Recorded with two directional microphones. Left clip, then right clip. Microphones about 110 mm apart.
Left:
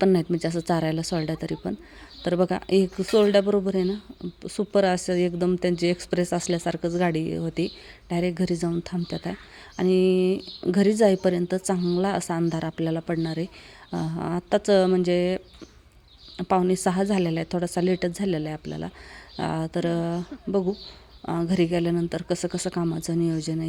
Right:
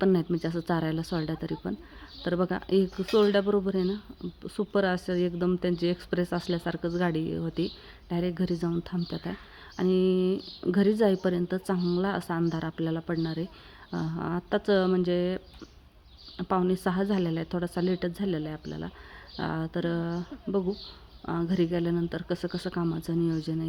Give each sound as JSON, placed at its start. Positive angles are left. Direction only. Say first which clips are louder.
{"t": 0.0, "sound": "speech", "louder": "left 4 dB", "side_deg": 25}
{"t": 16.4, "sound": "speech", "louder": "left 5 dB", "side_deg": 30}